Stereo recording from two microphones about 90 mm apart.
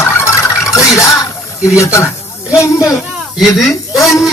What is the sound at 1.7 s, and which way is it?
Speech, 35° left (ahead or behind).